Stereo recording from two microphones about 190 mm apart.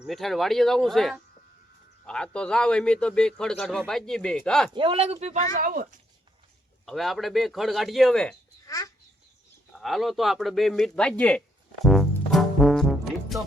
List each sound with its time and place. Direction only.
0.0 s a man's voice: centre (ahead or behind)
4.7 s speech: 30° right (ahead or behind); by 6.0 s 45° right (ahead or behind)
6.8 s a man's voice: centre (ahead or behind)
8.6 s speech: 15° left (ahead or behind)
9.7 s a man's voice: centre (ahead or behind)
12.3 s brass instrument: centre (ahead or behind)